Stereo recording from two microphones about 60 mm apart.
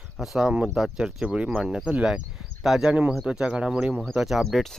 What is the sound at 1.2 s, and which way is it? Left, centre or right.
Speech, centre.